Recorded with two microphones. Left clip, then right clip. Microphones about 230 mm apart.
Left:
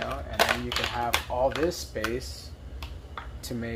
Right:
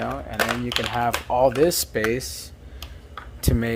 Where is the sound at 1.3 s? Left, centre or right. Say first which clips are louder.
Right 12 dB; right.